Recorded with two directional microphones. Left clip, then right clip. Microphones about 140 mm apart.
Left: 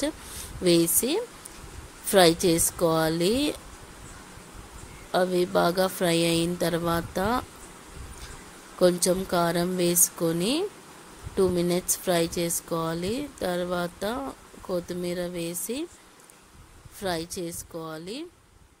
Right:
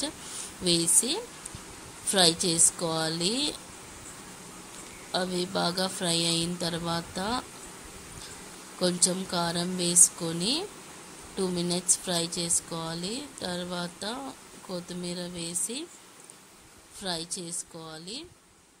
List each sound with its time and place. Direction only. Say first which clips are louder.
0.7 s speech: left 4 dB; 50° left (ahead or behind)
5.1 s speech: left 7 dB; 50° left (ahead or behind)
8.7 s speech: left 6 dB; 50° left (ahead or behind)
17.0 s speech: left 4 dB; 50° left (ahead or behind)